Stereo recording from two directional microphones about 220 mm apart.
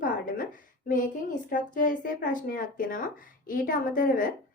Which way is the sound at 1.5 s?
40° left (ahead or behind).